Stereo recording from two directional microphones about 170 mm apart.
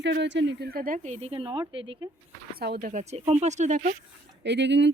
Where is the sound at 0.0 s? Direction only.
90° right; by 2.0 s 30° right (ahead or behind).